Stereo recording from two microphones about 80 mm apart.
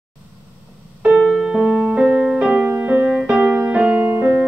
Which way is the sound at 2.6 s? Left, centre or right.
Centre.